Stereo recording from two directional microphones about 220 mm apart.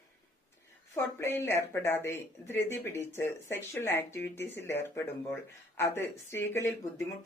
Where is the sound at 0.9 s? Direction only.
10° left (ahead or behind).